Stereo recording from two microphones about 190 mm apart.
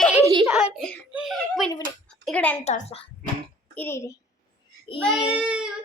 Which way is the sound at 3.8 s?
15° left (ahead or behind).